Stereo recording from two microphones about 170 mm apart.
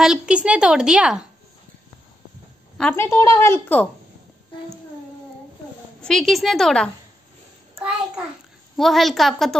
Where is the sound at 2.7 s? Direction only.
10° left (ahead or behind).